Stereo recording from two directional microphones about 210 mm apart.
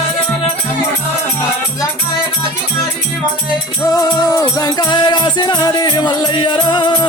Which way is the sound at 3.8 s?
15° left (ahead or behind).